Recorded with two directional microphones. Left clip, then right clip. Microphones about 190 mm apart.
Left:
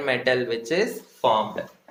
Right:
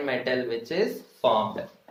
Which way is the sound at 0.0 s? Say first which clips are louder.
Left 4 dB; 35° left (ahead or behind).